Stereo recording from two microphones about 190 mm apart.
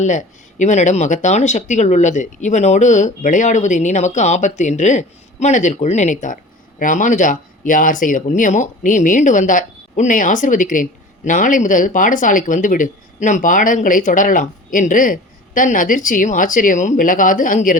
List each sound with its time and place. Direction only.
0.0 s speech: 40° left (ahead or behind)